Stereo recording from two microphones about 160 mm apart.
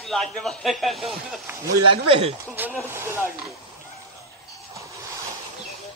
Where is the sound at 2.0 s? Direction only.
35° right (ahead or behind).